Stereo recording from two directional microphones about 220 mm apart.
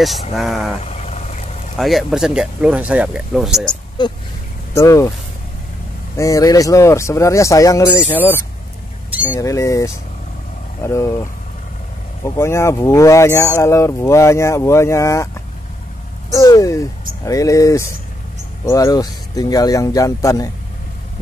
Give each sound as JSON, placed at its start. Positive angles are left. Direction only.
{"t": 0.0, "sound": "speech", "side_deg": 0}
{"t": 0.8, "sound": "vehicle", "side_deg": 30}
{"t": 1.8, "sound": "speech", "side_deg": 0}
{"t": 4.0, "sound": "speech", "side_deg": 20}
{"t": 6.1, "sound": "speech", "side_deg": 15}
{"t": 9.4, "sound": "speech", "side_deg": 15}
{"t": 12.4, "sound": "speech", "side_deg": 10}
{"t": 16.3, "sound": "speech", "side_deg": 15}